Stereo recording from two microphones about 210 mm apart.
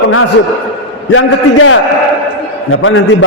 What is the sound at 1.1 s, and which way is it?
A man's voice, 75° left (ahead or behind).